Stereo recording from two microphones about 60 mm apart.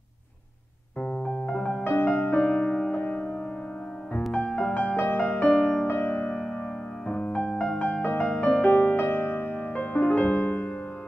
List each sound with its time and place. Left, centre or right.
1.0 s piano: left
1.9 s music: left
2.3 s music: left
5.9 s music: left
7.1 s music: left
8.0 s music: left
8.4 s music: centre